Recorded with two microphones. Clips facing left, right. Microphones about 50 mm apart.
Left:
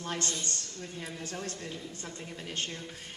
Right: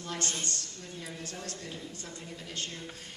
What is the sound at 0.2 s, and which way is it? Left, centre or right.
Speech, right.